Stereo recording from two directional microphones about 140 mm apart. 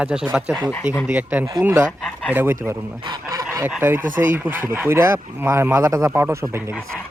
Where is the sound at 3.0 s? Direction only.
30° right (ahead or behind).